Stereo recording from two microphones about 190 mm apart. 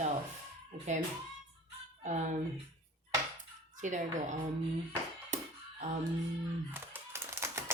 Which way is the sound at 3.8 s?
40° right (ahead or behind).